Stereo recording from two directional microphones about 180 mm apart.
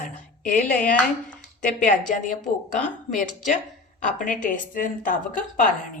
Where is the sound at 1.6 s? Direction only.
45° left (ahead or behind).